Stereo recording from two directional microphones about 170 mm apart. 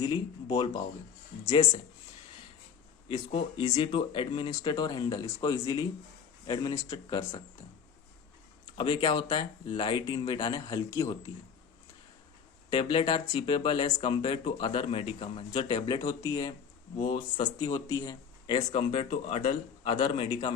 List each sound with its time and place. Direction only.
0.0 s speech: 30° left (ahead or behind)
3.1 s speech: 30° left (ahead or behind)
8.8 s speech: 30° left (ahead or behind)
12.7 s speech: 30° left (ahead or behind)
16.0 s speech: 20° left (ahead or behind)
17.7 s speech: 20° left (ahead or behind)
19.1 s speech: 50° left (ahead or behind)
19.8 s speech: 30° left (ahead or behind)